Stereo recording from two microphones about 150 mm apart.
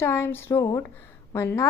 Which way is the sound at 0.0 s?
15° left (ahead or behind).